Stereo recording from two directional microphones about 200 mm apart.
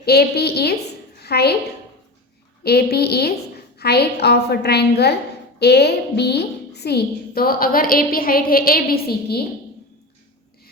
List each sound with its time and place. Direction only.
0.0 s a woman's voice: 55° left (ahead or behind)
2.6 s a woman's voice: 55° left (ahead or behind)